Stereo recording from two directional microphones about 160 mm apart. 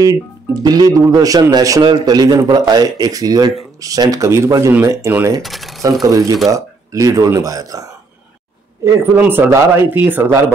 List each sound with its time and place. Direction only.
0.6 s a man's voice: 25° right (ahead or behind)
5.4 s speech: centre (ahead or behind)
6.0 s a man's voice: 20° right (ahead or behind)
8.8 s speech: 15° right (ahead or behind)